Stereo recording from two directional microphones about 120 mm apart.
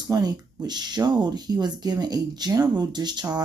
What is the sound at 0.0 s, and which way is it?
Speech, 35° right (ahead or behind).